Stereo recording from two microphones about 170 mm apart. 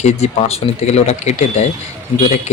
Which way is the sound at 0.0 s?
40° left (ahead or behind).